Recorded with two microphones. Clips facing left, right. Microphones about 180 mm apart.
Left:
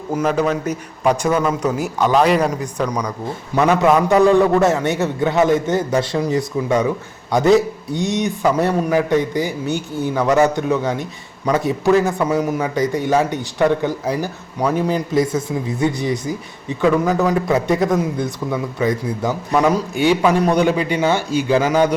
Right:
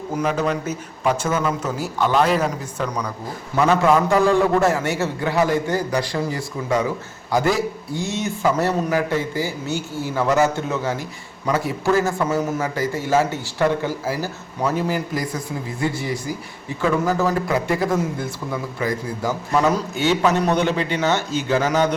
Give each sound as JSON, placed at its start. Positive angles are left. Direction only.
{"t": 0.2, "sound": "a man's voice", "side_deg": 5}
{"t": 2.2, "sound": "a man's voice", "side_deg": 0}
{"t": 3.5, "sound": "a man's voice", "side_deg": 20}